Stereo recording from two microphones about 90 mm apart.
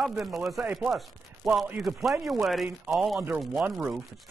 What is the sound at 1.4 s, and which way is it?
Speech, 5° right (ahead or behind).